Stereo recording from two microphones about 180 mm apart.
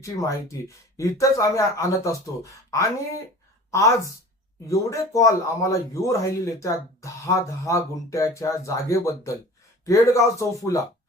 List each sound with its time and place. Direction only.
0.0 s a woman's voice: 15° left (ahead or behind)